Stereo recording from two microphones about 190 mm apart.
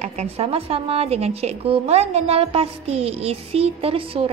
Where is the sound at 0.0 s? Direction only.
35° right (ahead or behind).